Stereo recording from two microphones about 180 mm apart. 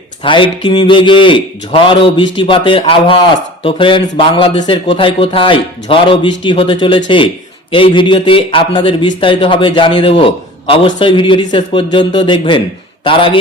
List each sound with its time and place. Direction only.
0.2 s a man's voice: 30° left (ahead or behind)